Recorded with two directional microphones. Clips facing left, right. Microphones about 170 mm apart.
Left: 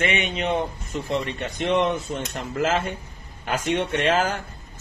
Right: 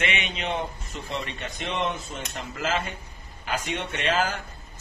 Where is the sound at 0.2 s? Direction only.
50° left (ahead or behind).